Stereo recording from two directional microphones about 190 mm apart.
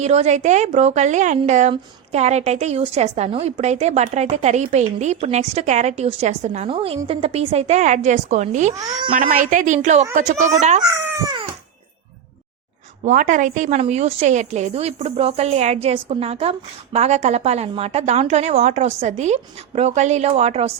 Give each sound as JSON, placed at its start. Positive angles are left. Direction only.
{"t": 0.0, "sound": "a woman's voice", "side_deg": -35}
{"t": 11.2, "sound": "a sound", "side_deg": -20}
{"t": 13.1, "sound": "a woman's voice", "side_deg": -40}